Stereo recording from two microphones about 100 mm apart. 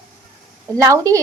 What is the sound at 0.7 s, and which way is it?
Speech, 35° right (ahead or behind).